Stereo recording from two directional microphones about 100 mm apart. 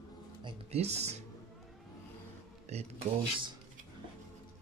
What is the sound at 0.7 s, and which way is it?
Speech, 90° right.